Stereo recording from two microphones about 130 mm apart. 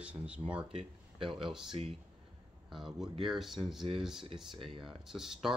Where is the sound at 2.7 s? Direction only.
Centre (ahead or behind).